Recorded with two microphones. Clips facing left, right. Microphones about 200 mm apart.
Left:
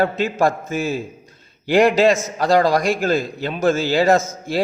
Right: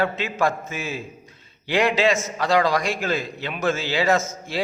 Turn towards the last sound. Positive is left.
turn(degrees=35)  # may be behind; listen again after turning